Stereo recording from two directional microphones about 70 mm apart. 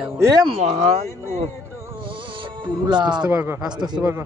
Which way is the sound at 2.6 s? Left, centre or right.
Right.